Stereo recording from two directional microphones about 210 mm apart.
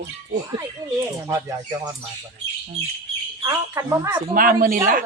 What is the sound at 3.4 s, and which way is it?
Speech, 15° right (ahead or behind).